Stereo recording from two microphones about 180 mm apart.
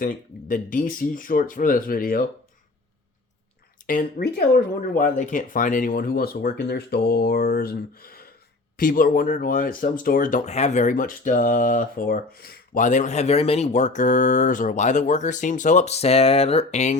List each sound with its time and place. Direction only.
0.0 s speech: 50° left (ahead or behind)
3.8 s speech: 55° left (ahead or behind); by 17.0 s 40° left (ahead or behind)